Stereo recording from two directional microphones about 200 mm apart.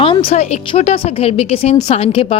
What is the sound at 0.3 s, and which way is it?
Speech, 35° left (ahead or behind).